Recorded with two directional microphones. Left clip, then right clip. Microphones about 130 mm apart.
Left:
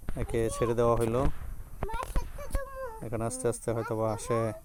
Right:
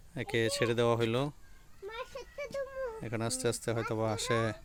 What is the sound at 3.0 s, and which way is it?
Speech, 15° right (ahead or behind).